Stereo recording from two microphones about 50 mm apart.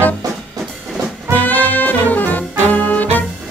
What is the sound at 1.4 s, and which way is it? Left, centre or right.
Brass instrument, left.